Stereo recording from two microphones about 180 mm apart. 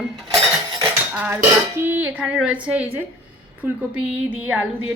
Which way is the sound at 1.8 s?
10° right (ahead or behind).